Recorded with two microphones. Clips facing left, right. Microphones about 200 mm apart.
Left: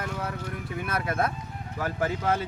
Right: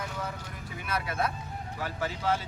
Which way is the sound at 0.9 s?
50° left (ahead or behind).